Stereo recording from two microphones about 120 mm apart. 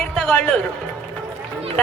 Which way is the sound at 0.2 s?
10° left (ahead or behind).